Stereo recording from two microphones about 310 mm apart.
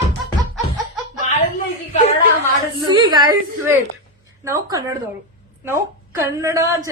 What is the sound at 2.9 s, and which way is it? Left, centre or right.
A woman's voice, centre.